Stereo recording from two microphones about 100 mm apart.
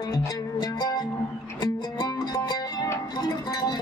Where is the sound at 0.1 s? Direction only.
40° left (ahead or behind).